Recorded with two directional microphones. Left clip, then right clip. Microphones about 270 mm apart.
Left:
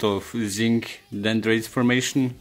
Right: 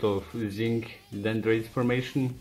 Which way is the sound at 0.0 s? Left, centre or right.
Left.